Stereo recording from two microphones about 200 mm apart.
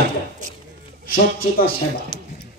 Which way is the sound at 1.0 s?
45° left (ahead or behind).